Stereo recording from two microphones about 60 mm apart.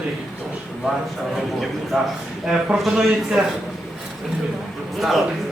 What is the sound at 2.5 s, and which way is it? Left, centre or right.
Speech, centre.